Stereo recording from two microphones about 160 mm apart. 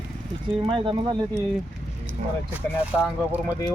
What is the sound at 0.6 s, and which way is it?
Speech, 30° right (ahead or behind).